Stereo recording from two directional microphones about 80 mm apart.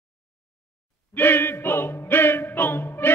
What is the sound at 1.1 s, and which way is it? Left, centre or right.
Music, left.